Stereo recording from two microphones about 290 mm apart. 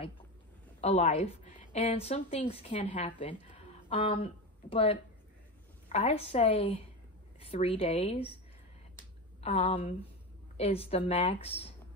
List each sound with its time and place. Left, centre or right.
0.7 s a woman's voice: left
9.4 s a woman's voice: left